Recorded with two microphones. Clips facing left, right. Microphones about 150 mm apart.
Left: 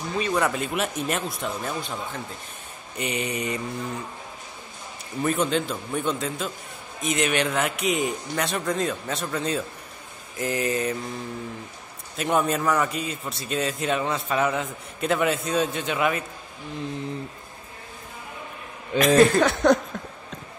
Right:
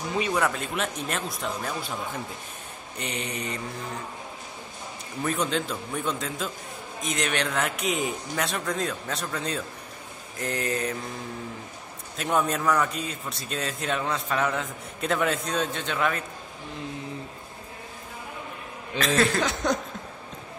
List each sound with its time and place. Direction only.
0.3 s a man's voice: 5° left (ahead or behind)
3.0 s mantra: 5° left (ahead or behind)
5.2 s a man's voice: 5° left (ahead or behind)
12.2 s a man's voice: centre (ahead or behind)
18.9 s mantra: 15° left (ahead or behind)
19.4 s a sound: 60° left (ahead or behind)